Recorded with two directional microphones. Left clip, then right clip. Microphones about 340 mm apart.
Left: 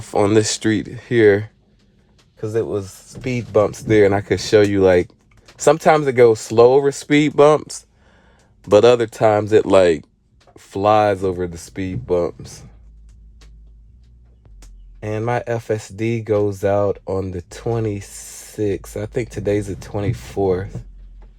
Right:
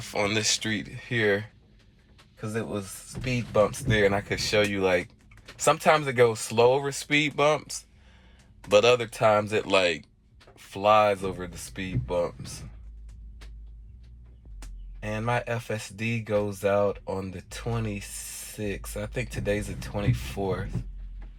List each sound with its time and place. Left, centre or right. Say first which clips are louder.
0.3 s speech: left 10 dB; left
2.6 s speech: left 11 dB; left
15.0 s speech: left 7 dB; left